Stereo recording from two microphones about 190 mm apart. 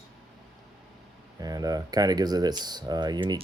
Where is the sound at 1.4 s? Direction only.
20° right (ahead or behind).